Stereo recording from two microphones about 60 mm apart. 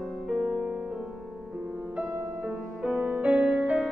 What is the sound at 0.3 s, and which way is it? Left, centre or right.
Music, centre.